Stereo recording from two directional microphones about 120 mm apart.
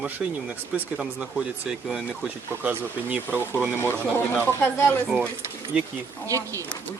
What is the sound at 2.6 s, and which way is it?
Speech, 15° right (ahead or behind).